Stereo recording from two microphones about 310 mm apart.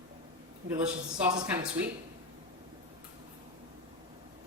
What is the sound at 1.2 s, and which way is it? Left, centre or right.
Speech, centre.